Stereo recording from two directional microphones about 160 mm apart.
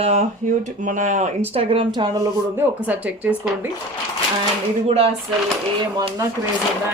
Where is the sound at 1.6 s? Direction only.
35° right (ahead or behind).